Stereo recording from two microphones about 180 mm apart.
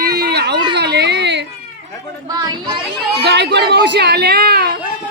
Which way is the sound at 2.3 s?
25° right (ahead or behind).